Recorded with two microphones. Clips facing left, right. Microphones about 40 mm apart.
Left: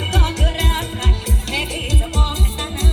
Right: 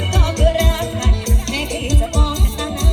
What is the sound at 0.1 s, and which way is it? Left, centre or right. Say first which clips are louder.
Music: right 7 dB; centre.